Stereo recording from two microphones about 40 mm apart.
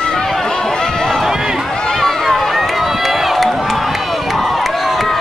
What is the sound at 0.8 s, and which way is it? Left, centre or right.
Run, centre.